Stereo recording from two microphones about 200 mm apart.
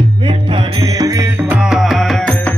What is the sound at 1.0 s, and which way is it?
Music, 15° right (ahead or behind).